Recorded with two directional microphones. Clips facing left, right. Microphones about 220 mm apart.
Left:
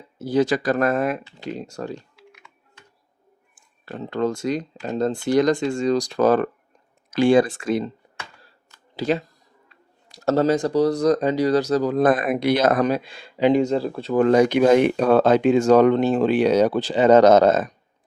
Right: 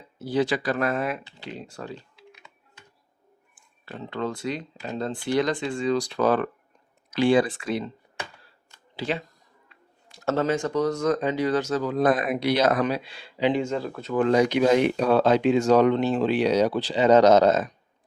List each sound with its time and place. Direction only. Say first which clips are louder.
0.2 s speech: left 4 dB; 45° left (ahead or behind)
2.1 s typing: left 1 dB; 20° right (ahead or behind)
3.5 s speech: left 5 dB; 45° left (ahead or behind)
9.0 s speech: left 6 dB; 40° left (ahead or behind)
14.3 s speech: left 4 dB; 50° left (ahead or behind)